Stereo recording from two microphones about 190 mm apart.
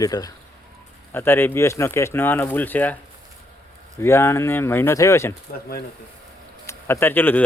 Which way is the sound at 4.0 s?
15° left (ahead or behind).